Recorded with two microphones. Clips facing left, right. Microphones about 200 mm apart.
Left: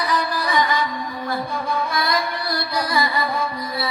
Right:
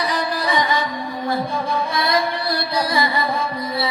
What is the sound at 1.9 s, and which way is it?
Music, 25° right (ahead or behind).